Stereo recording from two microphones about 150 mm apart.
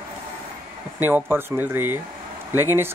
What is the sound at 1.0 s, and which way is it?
Speech, 15° right (ahead or behind).